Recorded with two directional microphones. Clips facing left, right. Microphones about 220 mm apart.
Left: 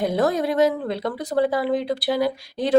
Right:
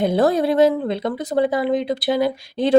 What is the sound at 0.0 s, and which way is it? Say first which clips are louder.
Speech: right 4 dB; 30° right (ahead or behind).